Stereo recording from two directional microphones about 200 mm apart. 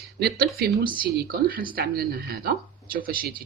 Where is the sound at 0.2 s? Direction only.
50° right (ahead or behind).